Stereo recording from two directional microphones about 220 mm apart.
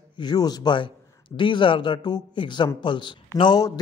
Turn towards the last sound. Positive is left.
turn(degrees=15)  # may be behind; listen again after turning